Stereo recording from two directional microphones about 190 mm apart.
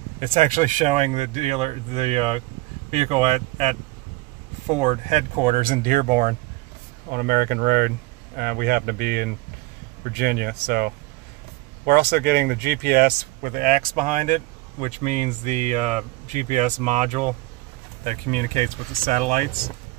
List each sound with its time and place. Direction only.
0.3 s speech: 40° right (ahead or behind)
4.7 s speech: 40° right (ahead or behind)